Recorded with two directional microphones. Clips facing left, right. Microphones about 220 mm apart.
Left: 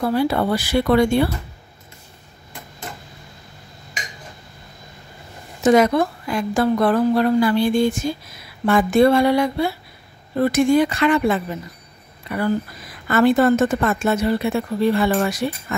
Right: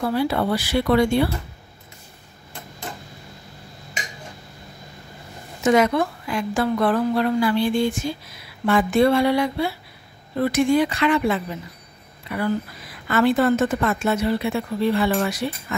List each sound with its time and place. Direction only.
0.0 s a woman's voice: 45° left (ahead or behind)
5.6 s a woman's voice: 40° left (ahead or behind)